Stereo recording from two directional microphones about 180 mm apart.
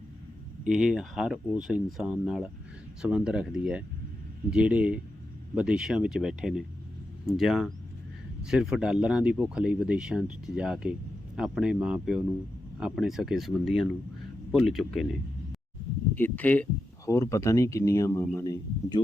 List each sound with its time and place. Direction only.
0.6 s speech: 5° right (ahead or behind)
16.1 s speech: 10° left (ahead or behind)